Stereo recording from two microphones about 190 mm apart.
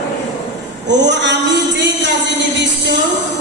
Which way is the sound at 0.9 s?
65° right (ahead or behind).